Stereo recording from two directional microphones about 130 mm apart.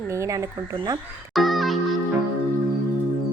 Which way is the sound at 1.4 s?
Centre (ahead or behind).